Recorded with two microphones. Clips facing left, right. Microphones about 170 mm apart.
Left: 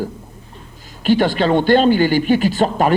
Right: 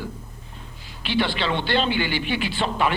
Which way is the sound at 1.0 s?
45° left (ahead or behind).